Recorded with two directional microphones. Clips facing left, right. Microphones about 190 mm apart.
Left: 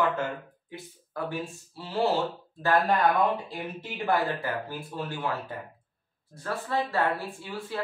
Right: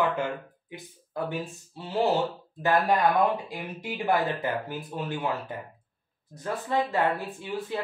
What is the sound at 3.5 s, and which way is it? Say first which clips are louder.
Speech: right 1 dB; 15° right (ahead or behind).